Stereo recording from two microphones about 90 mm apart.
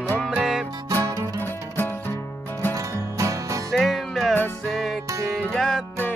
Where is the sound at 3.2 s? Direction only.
35° right (ahead or behind).